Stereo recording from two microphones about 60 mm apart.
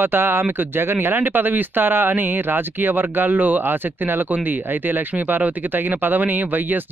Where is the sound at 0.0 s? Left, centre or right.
Right.